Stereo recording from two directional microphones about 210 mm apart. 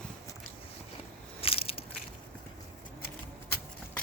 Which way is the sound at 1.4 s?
25° left (ahead or behind).